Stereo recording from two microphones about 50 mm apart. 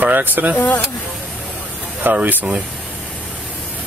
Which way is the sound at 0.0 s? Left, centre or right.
Right.